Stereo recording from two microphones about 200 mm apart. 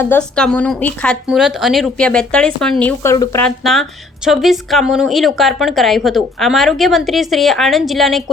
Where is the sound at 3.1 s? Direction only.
20° left (ahead or behind).